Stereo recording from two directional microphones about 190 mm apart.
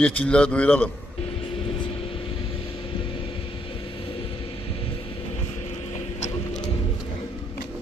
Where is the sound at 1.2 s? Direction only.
30° left (ahead or behind).